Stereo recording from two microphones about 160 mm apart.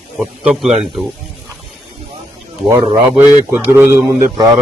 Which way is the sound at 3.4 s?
15° right (ahead or behind).